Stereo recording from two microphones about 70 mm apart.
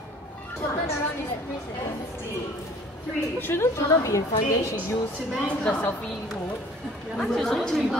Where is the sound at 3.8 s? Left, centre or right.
Left.